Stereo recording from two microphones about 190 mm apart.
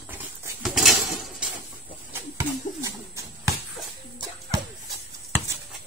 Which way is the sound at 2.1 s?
15° right (ahead or behind).